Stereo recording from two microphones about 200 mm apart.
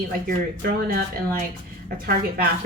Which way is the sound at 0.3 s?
45° right (ahead or behind).